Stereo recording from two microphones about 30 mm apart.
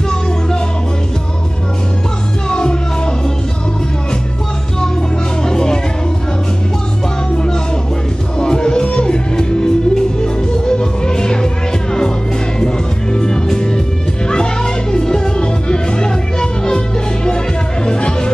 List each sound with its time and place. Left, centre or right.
2.5 s music: left
5.4 s music: left
8.4 s music: left